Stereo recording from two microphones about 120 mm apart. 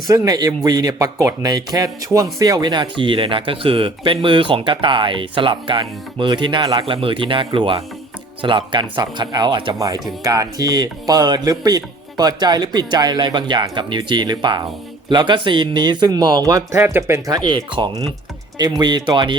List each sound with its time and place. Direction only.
0.1 s speech: 30° right (ahead or behind)
9.7 s speech: 30° right (ahead or behind)
17.3 s speech: 35° right (ahead or behind)